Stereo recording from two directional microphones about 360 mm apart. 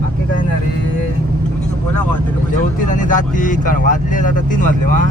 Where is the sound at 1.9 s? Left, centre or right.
Centre.